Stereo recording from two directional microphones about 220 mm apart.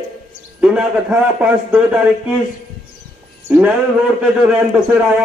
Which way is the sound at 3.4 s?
5° right (ahead or behind).